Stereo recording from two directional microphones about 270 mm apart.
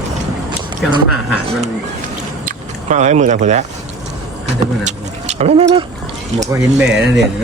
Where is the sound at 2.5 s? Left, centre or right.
Right.